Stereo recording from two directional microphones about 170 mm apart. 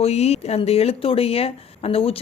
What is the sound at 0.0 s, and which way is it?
Speech, 40° left (ahead or behind).